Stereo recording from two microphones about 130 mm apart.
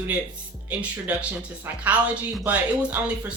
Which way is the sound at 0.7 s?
10° right (ahead or behind).